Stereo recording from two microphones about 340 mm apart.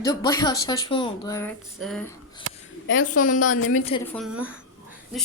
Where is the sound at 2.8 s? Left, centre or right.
Left.